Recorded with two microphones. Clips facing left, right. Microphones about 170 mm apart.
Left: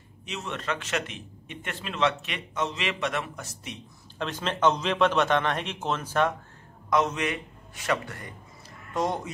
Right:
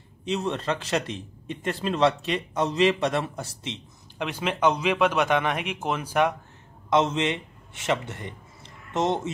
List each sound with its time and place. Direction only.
0.2 s a man's voice: 30° right (ahead or behind)
4.2 s a man's voice: 10° right (ahead or behind)
6.9 s a man's voice: 25° right (ahead or behind)